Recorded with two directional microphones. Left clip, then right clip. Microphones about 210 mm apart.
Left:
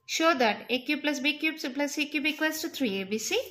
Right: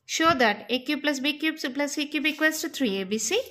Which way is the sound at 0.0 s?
25° right (ahead or behind).